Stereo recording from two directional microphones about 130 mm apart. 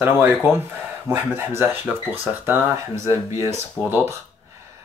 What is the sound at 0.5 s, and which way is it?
Speech, 15° right (ahead or behind).